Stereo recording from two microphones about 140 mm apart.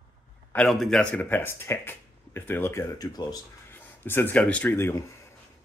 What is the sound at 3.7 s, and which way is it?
Speech, 15° left (ahead or behind).